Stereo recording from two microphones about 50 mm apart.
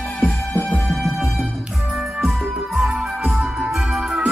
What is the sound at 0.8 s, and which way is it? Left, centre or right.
Music, centre.